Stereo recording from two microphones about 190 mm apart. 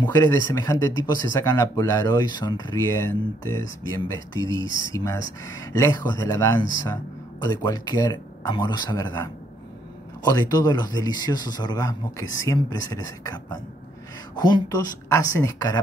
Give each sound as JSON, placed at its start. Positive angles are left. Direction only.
{"t": 0.0, "sound": "speech", "side_deg": 20}